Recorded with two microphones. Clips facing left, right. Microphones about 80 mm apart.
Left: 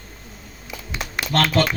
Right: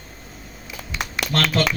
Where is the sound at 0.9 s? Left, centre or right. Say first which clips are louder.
Left 2 dB; right.